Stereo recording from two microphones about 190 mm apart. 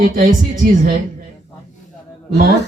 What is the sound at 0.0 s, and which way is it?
Speech, 45° right (ahead or behind).